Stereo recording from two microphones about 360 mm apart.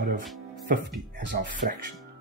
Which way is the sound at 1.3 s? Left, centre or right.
Right.